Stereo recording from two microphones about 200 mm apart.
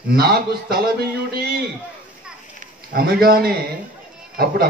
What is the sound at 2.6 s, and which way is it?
A man's voice, 50° right (ahead or behind).